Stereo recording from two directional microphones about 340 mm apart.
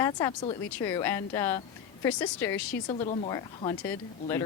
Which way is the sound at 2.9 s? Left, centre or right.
Centre.